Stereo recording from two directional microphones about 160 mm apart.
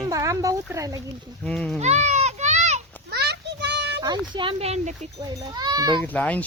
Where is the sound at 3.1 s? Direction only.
90° right.